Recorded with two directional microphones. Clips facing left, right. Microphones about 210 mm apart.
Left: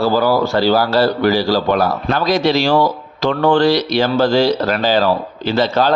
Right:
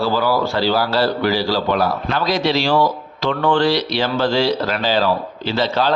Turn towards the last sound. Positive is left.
turn(degrees=45)  # may be behind; listen again after turning